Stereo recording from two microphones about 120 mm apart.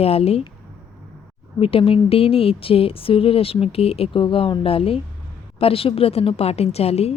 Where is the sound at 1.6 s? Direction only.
50° left (ahead or behind).